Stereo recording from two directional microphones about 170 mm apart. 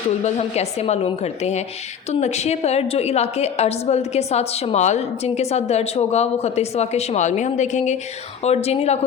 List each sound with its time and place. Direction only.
0.3 s a woman's voice: 40° left (ahead or behind)